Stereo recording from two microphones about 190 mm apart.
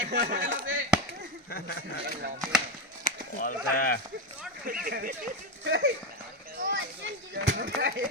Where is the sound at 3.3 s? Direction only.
45° left (ahead or behind).